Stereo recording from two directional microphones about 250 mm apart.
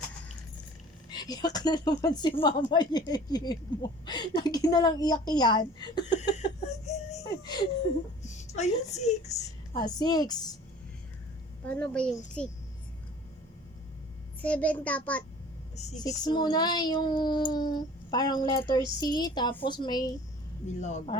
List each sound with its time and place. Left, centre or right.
1.1 s speech: centre
6.9 s a sound: left
7.3 s a sound: centre
8.2 s a sound: left
9.8 s speech: centre
11.6 s a woman's voice: centre
14.4 s a woman's voice: centre
16.0 s speech: centre
20.8 s speech: left